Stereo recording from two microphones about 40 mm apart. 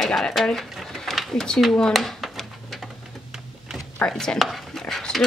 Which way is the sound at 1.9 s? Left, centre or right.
Centre.